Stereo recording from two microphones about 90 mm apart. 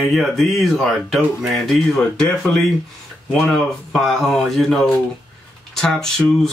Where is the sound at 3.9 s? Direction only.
Centre (ahead or behind).